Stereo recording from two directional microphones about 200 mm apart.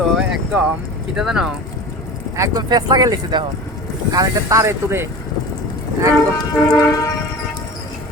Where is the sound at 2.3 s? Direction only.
15° right (ahead or behind).